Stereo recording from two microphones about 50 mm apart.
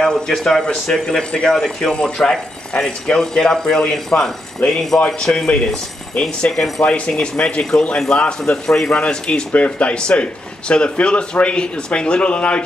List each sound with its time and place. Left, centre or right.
0.0 s speech: centre
9.5 s speech: left